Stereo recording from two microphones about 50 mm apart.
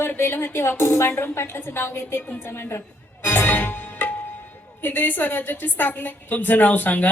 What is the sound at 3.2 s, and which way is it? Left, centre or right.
Music, left.